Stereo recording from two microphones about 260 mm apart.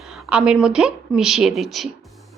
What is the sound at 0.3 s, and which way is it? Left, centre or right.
Speech, centre.